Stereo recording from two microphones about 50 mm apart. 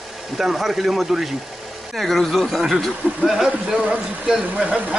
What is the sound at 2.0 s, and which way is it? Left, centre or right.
Speech, centre.